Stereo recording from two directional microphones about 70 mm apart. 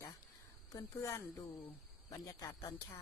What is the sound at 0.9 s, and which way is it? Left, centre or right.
Speech, left.